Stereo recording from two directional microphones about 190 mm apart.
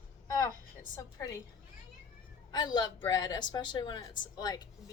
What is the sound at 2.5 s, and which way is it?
Speech, 20° left (ahead or behind).